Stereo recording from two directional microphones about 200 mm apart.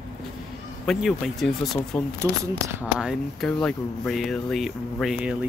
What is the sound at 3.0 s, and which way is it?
Speech, centre (ahead or behind).